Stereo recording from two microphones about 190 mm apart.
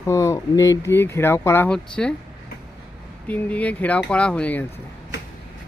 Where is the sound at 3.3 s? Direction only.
10° left (ahead or behind).